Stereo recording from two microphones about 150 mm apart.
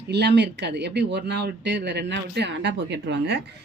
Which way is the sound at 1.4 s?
90° right.